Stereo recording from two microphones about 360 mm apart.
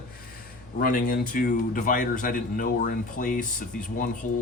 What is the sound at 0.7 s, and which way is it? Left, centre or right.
A man's voice, left.